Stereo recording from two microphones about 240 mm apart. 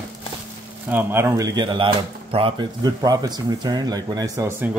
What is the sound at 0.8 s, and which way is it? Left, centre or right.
Speech, centre.